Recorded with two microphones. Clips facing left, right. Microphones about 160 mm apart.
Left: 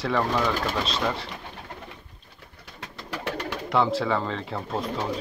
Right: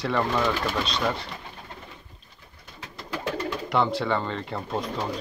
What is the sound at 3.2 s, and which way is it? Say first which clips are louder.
Bird: right 2 dB; 70° left (ahead or behind).